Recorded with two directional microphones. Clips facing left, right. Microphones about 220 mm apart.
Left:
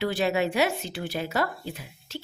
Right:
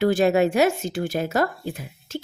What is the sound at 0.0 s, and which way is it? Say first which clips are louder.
Speech: right 7 dB; 45° right (ahead or behind).